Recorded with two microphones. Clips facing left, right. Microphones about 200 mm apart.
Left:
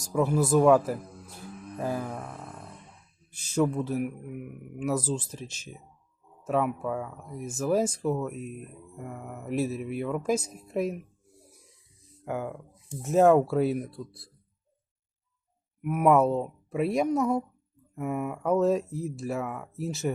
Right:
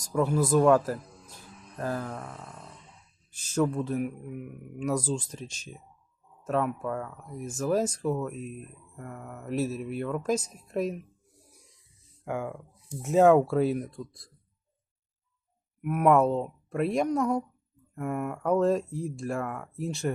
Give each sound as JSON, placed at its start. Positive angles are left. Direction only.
{"t": 0.0, "sound": "speech", "side_deg": 5}
{"t": 1.0, "sound": "music", "side_deg": 55}
{"t": 1.7, "sound": "speech", "side_deg": 10}
{"t": 12.2, "sound": "speech", "side_deg": 0}
{"t": 15.8, "sound": "speech", "side_deg": 5}